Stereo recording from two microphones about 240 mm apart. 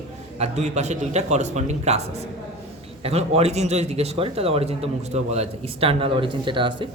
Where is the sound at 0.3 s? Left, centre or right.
Right.